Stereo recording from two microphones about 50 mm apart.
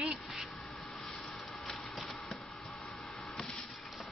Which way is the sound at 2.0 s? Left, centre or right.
Centre.